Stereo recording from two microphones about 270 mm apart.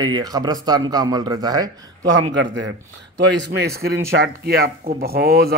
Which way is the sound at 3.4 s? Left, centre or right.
Right.